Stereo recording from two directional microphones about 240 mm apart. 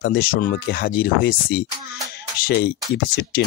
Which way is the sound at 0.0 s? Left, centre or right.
Left.